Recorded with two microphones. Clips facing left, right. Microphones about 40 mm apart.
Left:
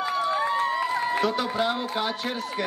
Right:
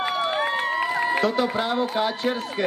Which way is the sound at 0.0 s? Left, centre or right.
Right.